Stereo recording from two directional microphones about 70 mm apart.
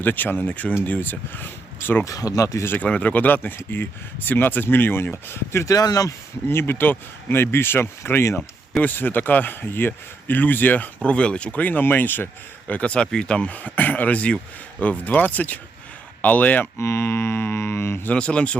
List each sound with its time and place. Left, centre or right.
0.0 s a man's voice: left
2.0 s speech: left
2.6 s a man's voice: left
5.7 s speech: left
6.5 s speech: left
8.8 s a man's voice: left
16.7 s speech: left
18.1 s a man's voice: centre